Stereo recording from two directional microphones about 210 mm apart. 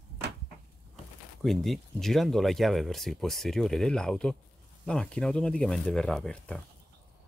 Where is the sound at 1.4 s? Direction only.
Centre (ahead or behind).